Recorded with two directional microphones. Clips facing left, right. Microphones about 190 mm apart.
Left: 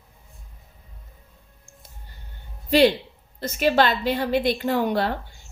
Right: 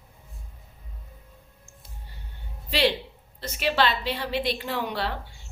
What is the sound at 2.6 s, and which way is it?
A woman's voice, 45° left (ahead or behind).